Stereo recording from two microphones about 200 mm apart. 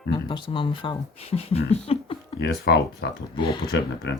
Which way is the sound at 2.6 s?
55° left (ahead or behind).